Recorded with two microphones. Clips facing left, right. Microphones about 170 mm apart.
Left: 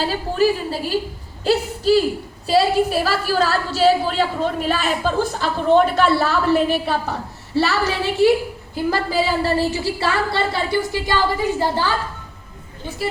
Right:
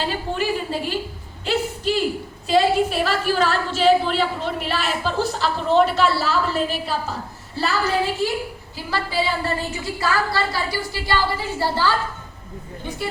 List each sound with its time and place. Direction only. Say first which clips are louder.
0.3 s a woman's voice: left 8 dB; 40° left (ahead or behind)
1.5 s a sound: left 6 dB; 40° left (ahead or behind)
2.5 s a woman's voice: left 1 dB; 40° left (ahead or behind); by 8.3 s 70° left (ahead or behind)
8.7 s a woman's voice: left 5 dB; 45° left (ahead or behind); by 11.9 s 15° left (ahead or behind)